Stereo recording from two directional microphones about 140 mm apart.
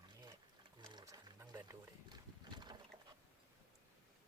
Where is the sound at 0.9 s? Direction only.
30° right (ahead or behind).